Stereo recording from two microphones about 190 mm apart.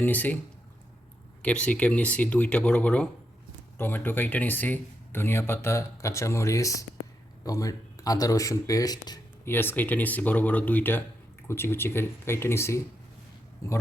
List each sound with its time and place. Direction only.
0.0 s speech: 10° left (ahead or behind)
1.4 s speech: 5° left (ahead or behind)